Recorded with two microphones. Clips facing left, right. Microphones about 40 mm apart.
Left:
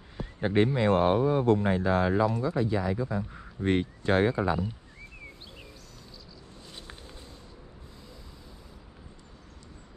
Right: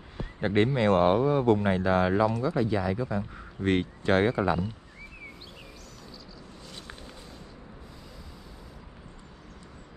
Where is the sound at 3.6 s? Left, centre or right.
Right.